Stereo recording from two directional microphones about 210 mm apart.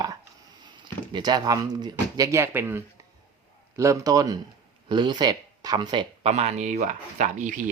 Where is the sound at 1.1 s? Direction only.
20° right (ahead or behind).